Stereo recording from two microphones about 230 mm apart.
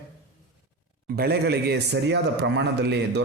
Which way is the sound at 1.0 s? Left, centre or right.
Right.